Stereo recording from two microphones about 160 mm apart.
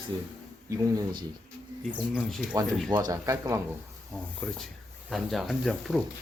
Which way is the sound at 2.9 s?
25° right (ahead or behind).